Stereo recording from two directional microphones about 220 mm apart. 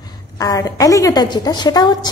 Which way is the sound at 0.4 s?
15° left (ahead or behind).